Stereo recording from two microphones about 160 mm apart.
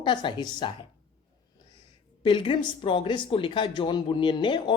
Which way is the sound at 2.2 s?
30° left (ahead or behind).